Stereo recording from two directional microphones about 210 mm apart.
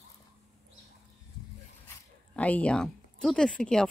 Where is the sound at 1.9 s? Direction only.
5° left (ahead or behind).